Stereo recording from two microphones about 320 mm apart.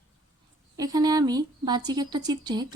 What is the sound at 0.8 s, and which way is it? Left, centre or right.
Speech, centre.